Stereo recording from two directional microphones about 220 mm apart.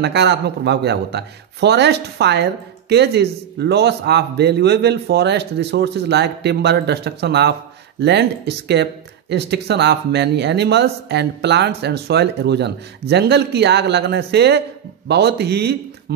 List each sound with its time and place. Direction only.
0.0 s a man's voice: 50° right (ahead or behind)